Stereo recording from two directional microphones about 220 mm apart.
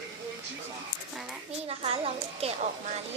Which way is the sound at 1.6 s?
25° right (ahead or behind).